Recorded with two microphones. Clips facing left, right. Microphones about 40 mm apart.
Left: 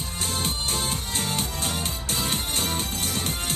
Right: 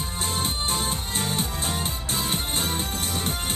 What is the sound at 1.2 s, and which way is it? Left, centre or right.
Music, right.